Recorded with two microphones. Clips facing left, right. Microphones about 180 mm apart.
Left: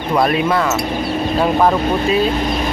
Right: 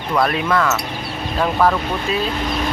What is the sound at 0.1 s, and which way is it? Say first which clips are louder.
Speech: left 3 dB; 15° left (ahead or behind).